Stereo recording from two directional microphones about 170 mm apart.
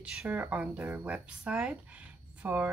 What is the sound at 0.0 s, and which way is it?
Speech, 10° right (ahead or behind).